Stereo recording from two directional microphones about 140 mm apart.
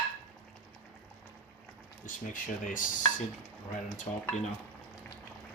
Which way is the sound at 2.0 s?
70° left (ahead or behind).